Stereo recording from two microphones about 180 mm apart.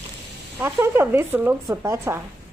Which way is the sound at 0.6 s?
15° right (ahead or behind).